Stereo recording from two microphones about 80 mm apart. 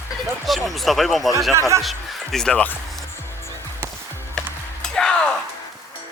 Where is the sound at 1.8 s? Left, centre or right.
Centre.